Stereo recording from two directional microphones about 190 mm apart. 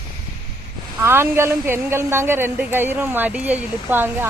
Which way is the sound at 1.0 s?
10° right (ahead or behind).